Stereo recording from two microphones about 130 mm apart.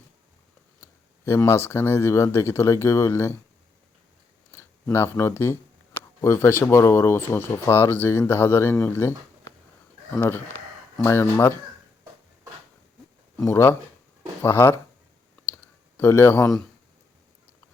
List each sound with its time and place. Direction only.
0.8 s speech: 20° left (ahead or behind)
4.5 s a sound: 20° left (ahead or behind)
6.2 s speech: 20° left (ahead or behind)
10.2 s speech: 20° left (ahead or behind)
13.4 s speech: 20° left (ahead or behind)
16.0 s speech: 20° left (ahead or behind)